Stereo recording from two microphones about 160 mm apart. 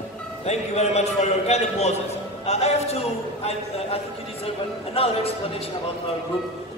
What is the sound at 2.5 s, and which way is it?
A man's voice, 40° left (ahead or behind).